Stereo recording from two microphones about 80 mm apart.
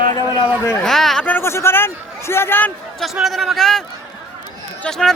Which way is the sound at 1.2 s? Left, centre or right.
Left.